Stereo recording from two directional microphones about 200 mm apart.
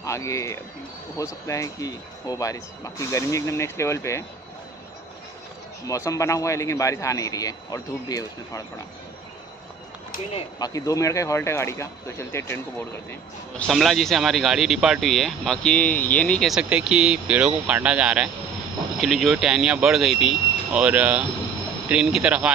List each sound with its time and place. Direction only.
0.0 s speech: 15° left (ahead or behind)
5.9 s speech: 15° left (ahead or behind)
10.3 s speech: 20° left (ahead or behind)
13.6 s speech: centre (ahead or behind)